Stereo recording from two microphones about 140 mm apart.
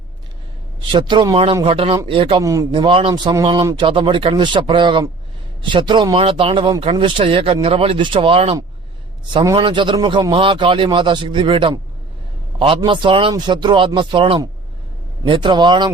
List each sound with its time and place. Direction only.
0.8 s a man's voice: 35° right (ahead or behind)
2.4 s a man's voice: 25° right (ahead or behind)
2.7 s a man's voice: 35° right (ahead or behind)
9.3 s a man's voice: 30° right (ahead or behind)